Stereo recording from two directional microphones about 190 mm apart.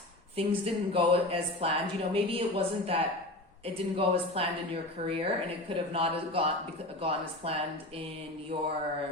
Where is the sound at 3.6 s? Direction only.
30° right (ahead or behind).